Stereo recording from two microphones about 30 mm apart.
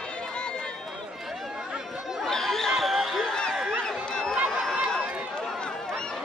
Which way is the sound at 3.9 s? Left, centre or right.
Centre.